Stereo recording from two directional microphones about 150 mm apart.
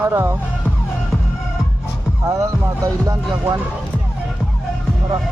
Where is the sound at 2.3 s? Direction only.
20° right (ahead or behind).